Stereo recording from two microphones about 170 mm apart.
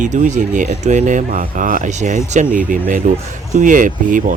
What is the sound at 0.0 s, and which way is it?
Speech, 45° right (ahead or behind).